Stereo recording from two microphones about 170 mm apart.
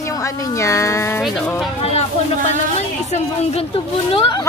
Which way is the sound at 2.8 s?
40° left (ahead or behind).